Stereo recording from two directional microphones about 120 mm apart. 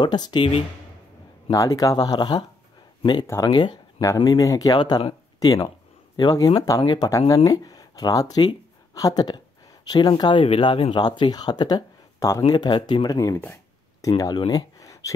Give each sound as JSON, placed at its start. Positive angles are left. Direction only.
{"t": 0.0, "sound": "speech", "side_deg": 35}
{"t": 1.5, "sound": "speech", "side_deg": 30}
{"t": 14.4, "sound": "a sound", "side_deg": 30}